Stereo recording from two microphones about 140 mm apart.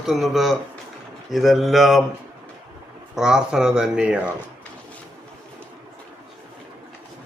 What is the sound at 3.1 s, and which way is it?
A man's voice, 5° right (ahead or behind).